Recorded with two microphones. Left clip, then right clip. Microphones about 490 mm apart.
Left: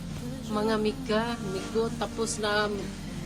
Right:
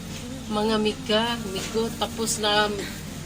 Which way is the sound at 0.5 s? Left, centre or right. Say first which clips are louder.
Right 4 dB; left.